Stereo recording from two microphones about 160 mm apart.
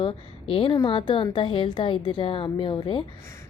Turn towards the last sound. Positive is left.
turn(degrees=30)  # may be behind; listen again after turning